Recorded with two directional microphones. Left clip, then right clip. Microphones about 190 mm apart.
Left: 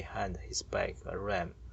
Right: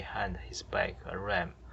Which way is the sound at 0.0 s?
45° left (ahead or behind).